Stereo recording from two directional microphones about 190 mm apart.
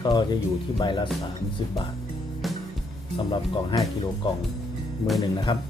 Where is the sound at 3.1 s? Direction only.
25° left (ahead or behind).